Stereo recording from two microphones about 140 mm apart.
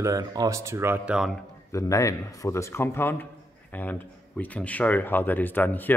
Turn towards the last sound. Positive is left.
turn(degrees=15)  # may be behind; listen again after turning